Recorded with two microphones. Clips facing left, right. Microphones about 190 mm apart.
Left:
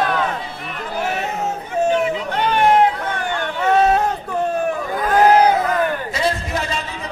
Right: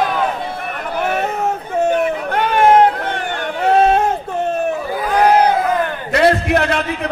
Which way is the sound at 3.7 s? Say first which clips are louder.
Right 3 dB; 30° right (ahead or behind).